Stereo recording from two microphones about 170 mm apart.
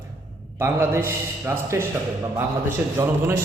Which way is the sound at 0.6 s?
15° right (ahead or behind).